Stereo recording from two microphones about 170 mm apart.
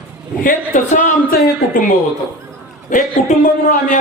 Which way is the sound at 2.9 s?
50° left (ahead or behind).